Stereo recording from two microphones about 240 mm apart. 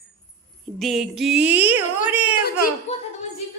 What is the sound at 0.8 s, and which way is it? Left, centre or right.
A woman's voice, centre.